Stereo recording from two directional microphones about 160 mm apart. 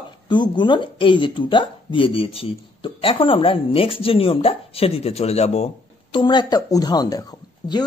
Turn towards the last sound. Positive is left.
turn(degrees=25)  # may be behind; listen again after turning